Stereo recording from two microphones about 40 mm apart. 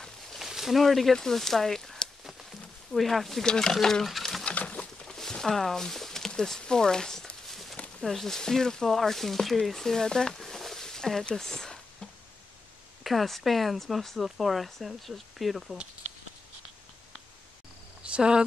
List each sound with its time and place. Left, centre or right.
0.4 s a sound: centre
1.1 s speech: centre
2.2 s a sound: centre
3.4 s speech: centre
4.1 s patter: centre
4.5 s bird: left
5.0 s a sound: centre
6.6 s speech: centre
8.0 s speech: centre
11.2 s a sound: centre
13.0 s speech: centre
18.1 s speech: right